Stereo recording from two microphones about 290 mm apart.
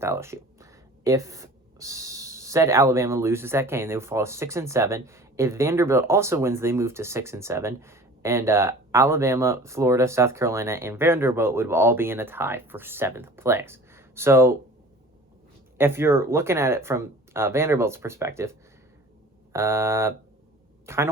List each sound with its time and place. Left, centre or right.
0.0 s speech: centre
15.8 s speech: centre
19.5 s speech: centre